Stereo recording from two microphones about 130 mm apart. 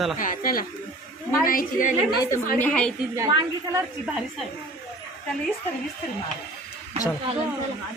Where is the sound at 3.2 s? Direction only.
25° right (ahead or behind).